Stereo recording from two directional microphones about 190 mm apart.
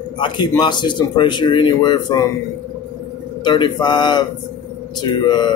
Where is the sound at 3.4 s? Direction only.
25° left (ahead or behind).